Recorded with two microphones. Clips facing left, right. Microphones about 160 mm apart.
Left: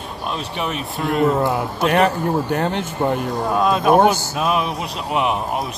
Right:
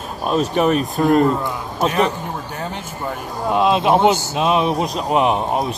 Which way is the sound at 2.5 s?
65° left (ahead or behind).